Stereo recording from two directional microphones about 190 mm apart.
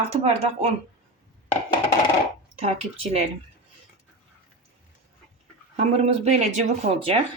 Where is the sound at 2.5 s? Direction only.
30° right (ahead or behind).